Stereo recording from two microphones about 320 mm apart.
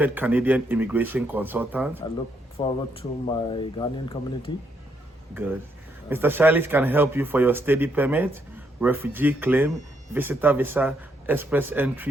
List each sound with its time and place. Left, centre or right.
0.0 s a man's voice: centre
2.6 s speech: centre
5.3 s a man's voice: centre